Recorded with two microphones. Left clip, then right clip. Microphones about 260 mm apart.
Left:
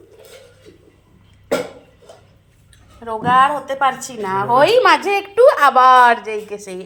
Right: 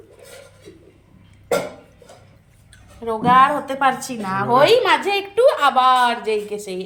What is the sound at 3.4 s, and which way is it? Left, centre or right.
A woman's voice, left.